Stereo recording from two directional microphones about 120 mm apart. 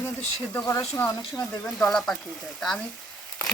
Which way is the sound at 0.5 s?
20° left (ahead or behind).